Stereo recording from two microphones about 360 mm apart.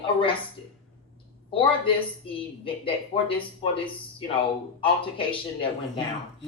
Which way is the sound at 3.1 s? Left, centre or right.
Centre.